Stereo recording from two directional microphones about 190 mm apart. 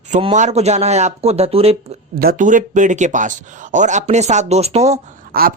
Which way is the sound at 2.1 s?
50° right (ahead or behind).